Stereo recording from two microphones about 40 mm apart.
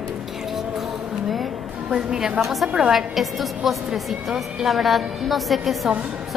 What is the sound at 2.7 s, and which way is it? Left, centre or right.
A woman's voice, centre.